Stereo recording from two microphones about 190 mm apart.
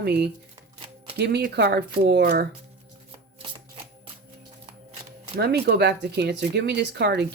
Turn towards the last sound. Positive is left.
turn(degrees=-60)  # may be behind; listen again after turning